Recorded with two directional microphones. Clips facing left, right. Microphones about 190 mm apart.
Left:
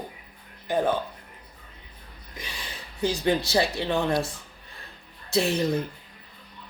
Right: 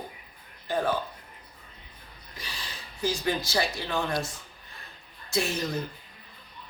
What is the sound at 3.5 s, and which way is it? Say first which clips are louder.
Speech: left 5 dB; 25° left (ahead or behind).